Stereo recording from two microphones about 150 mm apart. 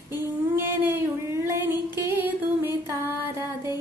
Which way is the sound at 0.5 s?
15° right (ahead or behind).